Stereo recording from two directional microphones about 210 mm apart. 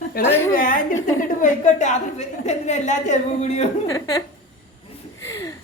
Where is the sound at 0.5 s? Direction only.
40° left (ahead or behind).